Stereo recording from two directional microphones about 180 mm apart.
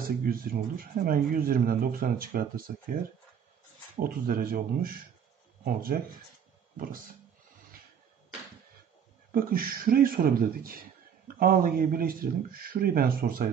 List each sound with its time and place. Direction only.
0.2 s speech: 55° right (ahead or behind)
4.0 s speech: 55° right (ahead or behind)
9.3 s speech: 55° right (ahead or behind)